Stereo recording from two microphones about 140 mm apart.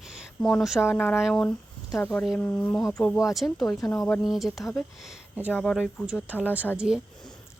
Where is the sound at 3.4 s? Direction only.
25° left (ahead or behind).